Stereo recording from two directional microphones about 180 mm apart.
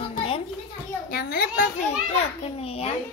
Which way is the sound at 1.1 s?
55° left (ahead or behind).